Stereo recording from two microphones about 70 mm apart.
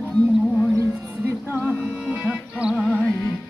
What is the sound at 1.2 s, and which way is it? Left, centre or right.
Music, right.